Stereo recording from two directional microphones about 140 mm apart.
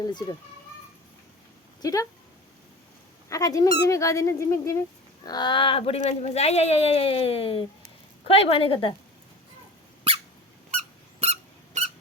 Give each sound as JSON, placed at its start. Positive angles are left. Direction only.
{"t": 0.1, "sound": "a woman's voice", "side_deg": 30}
{"t": 1.8, "sound": "speech", "side_deg": 25}
{"t": 3.2, "sound": "a woman's voice", "side_deg": 25}
{"t": 10.8, "sound": "squeak", "side_deg": -50}